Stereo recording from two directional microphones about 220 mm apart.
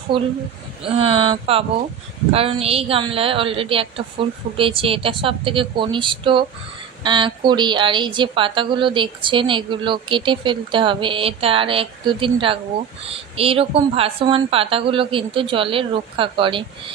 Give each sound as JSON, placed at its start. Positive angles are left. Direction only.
{"t": 0.1, "sound": "a woman's voice", "side_deg": -25}